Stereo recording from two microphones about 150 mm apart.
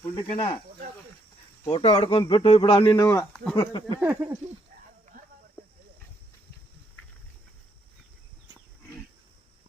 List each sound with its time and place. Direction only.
0.0 s speech: 30° left (ahead or behind)
1.7 s speech: 40° left (ahead or behind)
3.3 s speech: 10° left (ahead or behind)
3.6 s speech: 30° left (ahead or behind)
4.1 s a sound: 15° right (ahead or behind)
5.6 s a sound: 10° left (ahead or behind)